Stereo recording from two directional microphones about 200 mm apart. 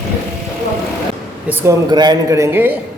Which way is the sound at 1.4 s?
15° right (ahead or behind).